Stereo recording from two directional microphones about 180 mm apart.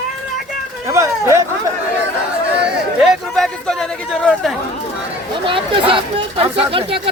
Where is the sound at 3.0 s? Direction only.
Centre (ahead or behind).